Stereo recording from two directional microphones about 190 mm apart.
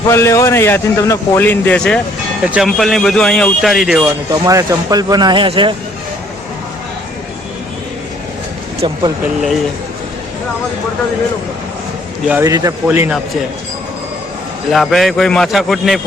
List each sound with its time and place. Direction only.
0.1 s a man's voice: 15° left (ahead or behind); by 4.0 s centre (ahead or behind)
4.0 s speech: 15° right (ahead or behind)
8.8 s speech: 25° right (ahead or behind)
9.2 s speech: centre (ahead or behind)
12.3 s a man's voice: 15° right (ahead or behind)
14.7 s speech: centre (ahead or behind)